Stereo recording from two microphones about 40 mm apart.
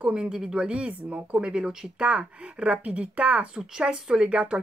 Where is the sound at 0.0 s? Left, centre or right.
Right.